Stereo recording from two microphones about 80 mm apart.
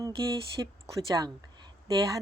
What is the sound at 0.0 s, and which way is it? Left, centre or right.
Speech, right.